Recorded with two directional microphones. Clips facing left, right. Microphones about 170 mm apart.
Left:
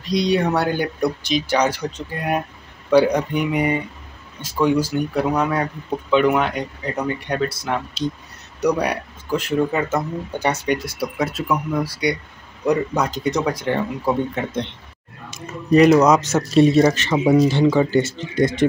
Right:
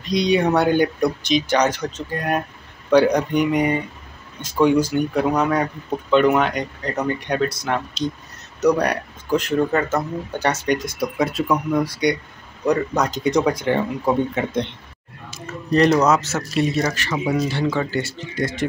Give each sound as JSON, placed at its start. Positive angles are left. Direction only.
{"t": 0.1, "sound": "speech", "side_deg": 0}
{"t": 15.7, "sound": "speech", "side_deg": 5}
{"t": 16.5, "sound": "speech", "side_deg": 30}